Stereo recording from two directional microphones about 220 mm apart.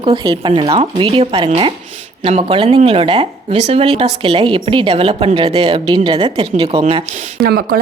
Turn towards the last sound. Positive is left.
turn(degrees=-45)  # may be behind; listen again after turning